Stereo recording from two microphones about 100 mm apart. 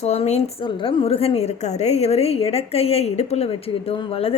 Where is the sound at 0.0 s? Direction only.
90° left.